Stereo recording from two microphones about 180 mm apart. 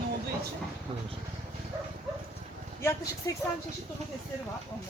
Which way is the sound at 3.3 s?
20° left (ahead or behind).